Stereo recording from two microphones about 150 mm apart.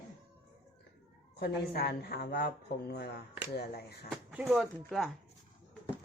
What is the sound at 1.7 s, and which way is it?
Speech, 90° left.